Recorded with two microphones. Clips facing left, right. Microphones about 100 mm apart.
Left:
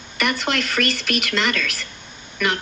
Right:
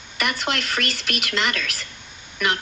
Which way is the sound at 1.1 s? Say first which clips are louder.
Even; 35° left (ahead or behind).